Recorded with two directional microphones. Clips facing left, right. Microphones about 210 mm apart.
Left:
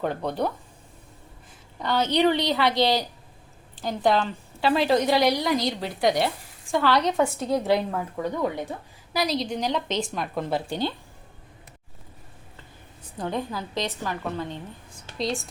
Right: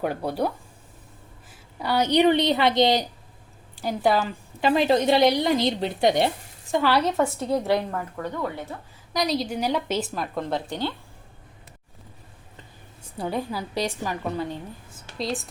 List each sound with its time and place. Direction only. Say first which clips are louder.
0.0 s a woman's voice: right 1 dB; 10° right (ahead or behind)
1.8 s a woman's voice: right 2 dB; 10° right (ahead or behind)
6.8 s a woman's voice: even; 5° right (ahead or behind); by 8.7 s 15° left (ahead or behind)
9.1 s a woman's voice: right 1 dB; centre (ahead or behind)
13.1 s a woman's voice: right 1 dB; 10° right (ahead or behind)